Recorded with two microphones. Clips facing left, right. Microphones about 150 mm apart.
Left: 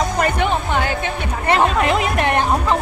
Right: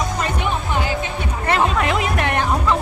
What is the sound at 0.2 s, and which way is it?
Music, 60° left (ahead or behind).